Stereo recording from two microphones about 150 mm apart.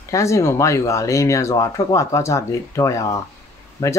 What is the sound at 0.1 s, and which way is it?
Speech, 20° left (ahead or behind).